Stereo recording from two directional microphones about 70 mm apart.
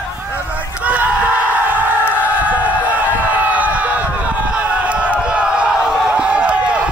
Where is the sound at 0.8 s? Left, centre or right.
Right.